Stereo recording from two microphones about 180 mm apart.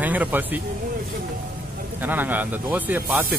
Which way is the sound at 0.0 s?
10° right (ahead or behind).